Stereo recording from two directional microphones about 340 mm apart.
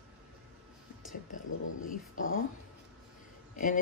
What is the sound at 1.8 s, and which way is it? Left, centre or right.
Speech, left.